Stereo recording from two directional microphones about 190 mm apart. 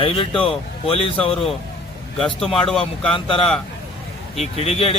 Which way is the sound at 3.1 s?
30° left (ahead or behind).